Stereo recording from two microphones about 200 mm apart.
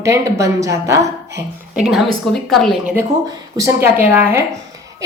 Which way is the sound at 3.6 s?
15° right (ahead or behind).